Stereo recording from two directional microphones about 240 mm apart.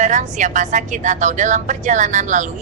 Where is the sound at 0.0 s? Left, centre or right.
Right.